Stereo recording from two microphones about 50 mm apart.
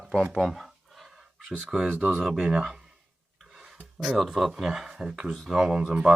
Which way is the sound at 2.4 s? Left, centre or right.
Centre.